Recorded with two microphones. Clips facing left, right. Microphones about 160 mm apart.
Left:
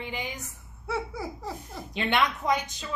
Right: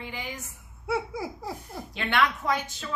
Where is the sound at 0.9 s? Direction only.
10° right (ahead or behind).